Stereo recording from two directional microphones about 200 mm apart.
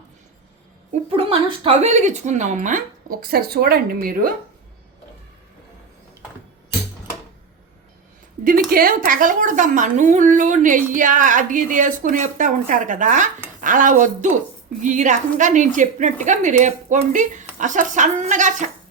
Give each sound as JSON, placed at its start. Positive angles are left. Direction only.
{"t": 1.1, "sound": "a woman's voice", "side_deg": -30}
{"t": 8.4, "sound": "a woman's voice", "side_deg": -45}